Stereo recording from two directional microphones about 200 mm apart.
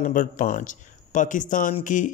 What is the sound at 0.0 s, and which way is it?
Speech, 40° left (ahead or behind).